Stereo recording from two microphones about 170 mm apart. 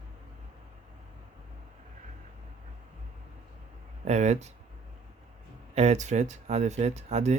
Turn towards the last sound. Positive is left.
turn(degrees=-40)  # may be behind; listen again after turning